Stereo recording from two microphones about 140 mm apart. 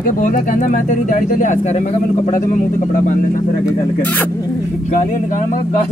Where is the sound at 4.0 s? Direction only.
10° left (ahead or behind).